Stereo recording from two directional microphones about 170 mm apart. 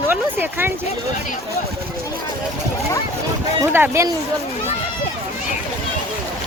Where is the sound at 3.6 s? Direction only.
15° right (ahead or behind).